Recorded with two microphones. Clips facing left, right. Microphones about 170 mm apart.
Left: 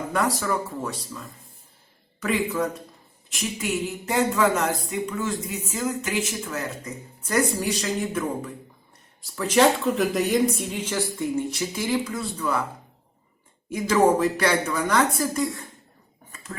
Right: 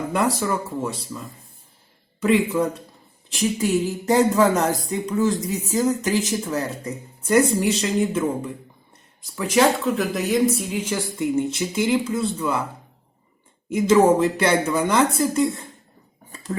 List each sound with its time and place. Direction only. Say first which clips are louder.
0.3 s speech: right 2 dB; 25° right (ahead or behind)
2.2 s speech: right 5 dB; 30° right (ahead or behind)
7.3 s speech: right 6 dB; 25° right (ahead or behind)
9.3 s speech: right 1 dB; 10° right (ahead or behind)
13.7 s speech: right 4 dB; 25° right (ahead or behind)
16.3 s cutlery: right 9 dB; 30° right (ahead or behind)